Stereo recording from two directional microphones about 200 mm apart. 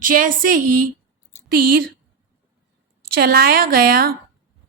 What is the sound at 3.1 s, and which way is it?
Speech, 50° right (ahead or behind).